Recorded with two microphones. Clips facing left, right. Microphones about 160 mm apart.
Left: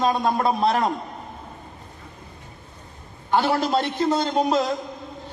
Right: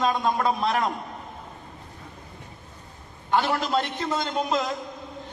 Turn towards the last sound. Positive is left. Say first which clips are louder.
# left 5 dB
turn(degrees=35)  # may be behind; listen again after turning